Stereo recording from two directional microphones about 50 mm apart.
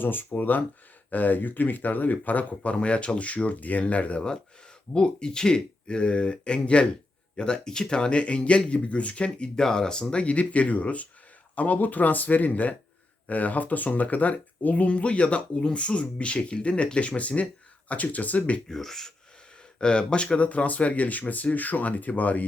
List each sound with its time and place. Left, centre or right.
0.0 s speech: left
4.9 s speech: centre
18.7 s speech: centre
19.8 s speech: centre